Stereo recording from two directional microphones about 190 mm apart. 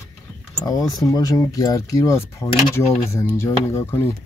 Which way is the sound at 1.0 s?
20° left (ahead or behind).